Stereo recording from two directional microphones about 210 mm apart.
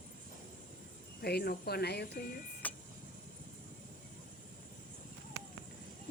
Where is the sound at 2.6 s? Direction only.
5° left (ahead or behind).